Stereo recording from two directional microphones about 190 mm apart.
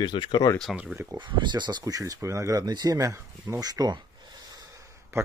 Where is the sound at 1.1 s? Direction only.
25° right (ahead or behind).